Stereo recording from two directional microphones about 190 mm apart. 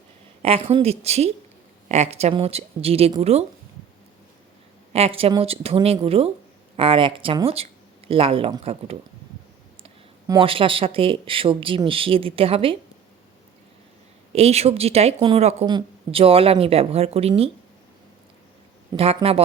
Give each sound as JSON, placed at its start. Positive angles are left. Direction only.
{"t": 0.4, "sound": "a woman's voice", "side_deg": -30}
{"t": 4.9, "sound": "a woman's voice", "side_deg": -30}
{"t": 10.2, "sound": "speech", "side_deg": -25}
{"t": 14.3, "sound": "a woman's voice", "side_deg": -30}
{"t": 18.9, "sound": "a woman's voice", "side_deg": -30}